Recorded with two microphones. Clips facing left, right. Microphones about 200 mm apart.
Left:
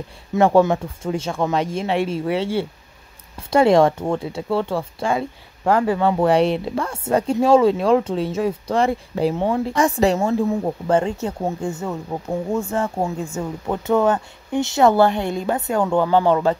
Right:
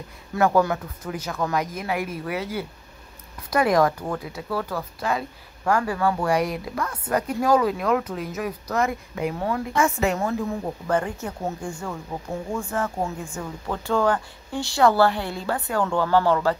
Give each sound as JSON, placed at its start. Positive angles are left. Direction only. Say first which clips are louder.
{"t": 0.3, "sound": "a woman's voice", "louder": "left 5 dB", "side_deg": 25}